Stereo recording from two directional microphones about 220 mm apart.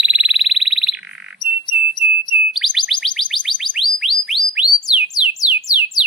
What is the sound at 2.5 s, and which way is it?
Bird, centre (ahead or behind).